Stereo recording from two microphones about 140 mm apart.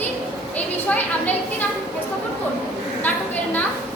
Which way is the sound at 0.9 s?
10° left (ahead or behind).